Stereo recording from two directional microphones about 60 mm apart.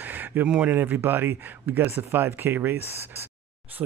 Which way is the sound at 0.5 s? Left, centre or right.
Right.